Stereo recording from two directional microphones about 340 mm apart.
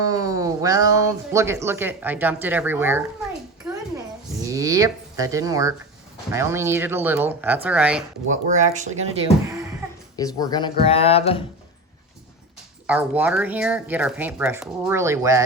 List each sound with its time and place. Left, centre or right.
0.0 s speech: centre
4.4 s speech: centre
8.3 s speech: right
10.2 s speech: centre
12.9 s speech: centre